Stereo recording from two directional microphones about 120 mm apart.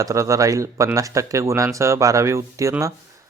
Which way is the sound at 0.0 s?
25° right (ahead or behind).